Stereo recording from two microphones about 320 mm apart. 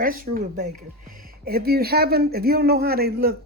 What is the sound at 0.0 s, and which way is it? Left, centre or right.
Speech, right.